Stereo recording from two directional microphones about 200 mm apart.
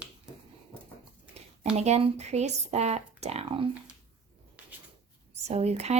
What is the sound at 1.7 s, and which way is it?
A woman's voice, 35° right (ahead or behind).